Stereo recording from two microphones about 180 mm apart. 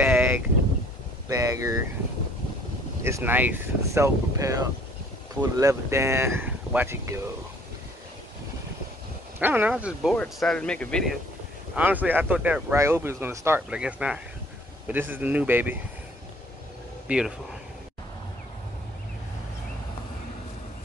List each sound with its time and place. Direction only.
0.0 s a sound: 10° right (ahead or behind)
1.3 s speech: 20° right (ahead or behind)
3.0 s speech: 15° right (ahead or behind)
9.4 s speech: 10° right (ahead or behind)
11.7 s speech: 10° right (ahead or behind)
17.1 s speech: 10° right (ahead or behind)